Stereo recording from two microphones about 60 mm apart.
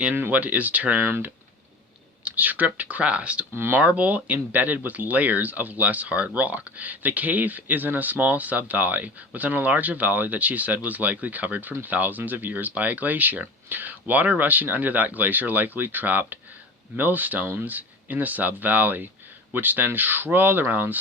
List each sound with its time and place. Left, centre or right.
0.0 s speech: right
2.2 s speech: right
3.5 s speech: right
3.8 s speech: right